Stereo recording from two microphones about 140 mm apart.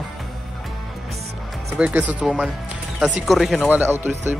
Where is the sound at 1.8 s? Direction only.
10° right (ahead or behind).